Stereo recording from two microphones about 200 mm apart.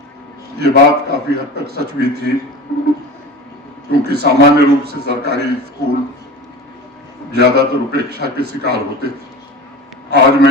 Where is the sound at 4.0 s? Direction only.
55° right (ahead or behind).